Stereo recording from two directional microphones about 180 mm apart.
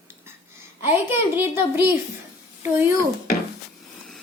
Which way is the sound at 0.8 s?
10° right (ahead or behind).